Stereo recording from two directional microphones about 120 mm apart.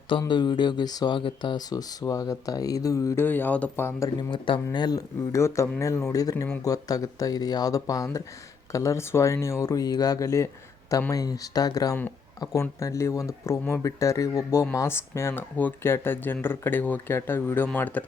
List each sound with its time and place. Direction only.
0.3 s speech: 40° left (ahead or behind)
3.2 s speech: 15° left (ahead or behind)
4.2 s speech: 45° left (ahead or behind); by 18.0 s 15° left (ahead or behind)